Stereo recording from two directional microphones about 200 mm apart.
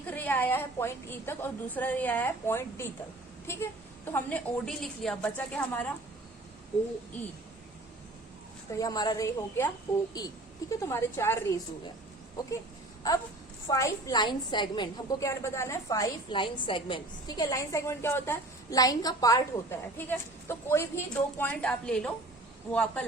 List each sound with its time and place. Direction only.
0.0 s a woman's voice: 10° left (ahead or behind)
8.7 s a woman's voice: 20° left (ahead or behind)
13.7 s a woman's voice: 15° left (ahead or behind)